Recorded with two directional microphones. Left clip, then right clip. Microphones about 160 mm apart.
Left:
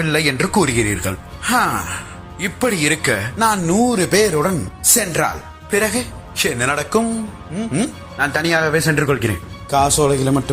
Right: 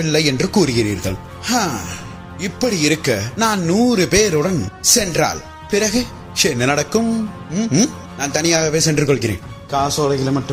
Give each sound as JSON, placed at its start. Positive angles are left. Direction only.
{"t": 0.0, "sound": "a man's voice", "side_deg": -60}
{"t": 3.3, "sound": "speech", "side_deg": -30}
{"t": 3.9, "sound": "speech", "side_deg": -40}
{"t": 5.8, "sound": "a man's voice", "side_deg": -55}
{"t": 7.5, "sound": "speech", "side_deg": -85}
{"t": 8.2, "sound": "a man's voice", "side_deg": -40}
{"t": 9.6, "sound": "speech", "side_deg": 5}